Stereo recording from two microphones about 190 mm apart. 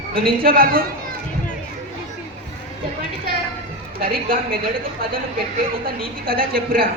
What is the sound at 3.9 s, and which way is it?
Speech, 50° right (ahead or behind).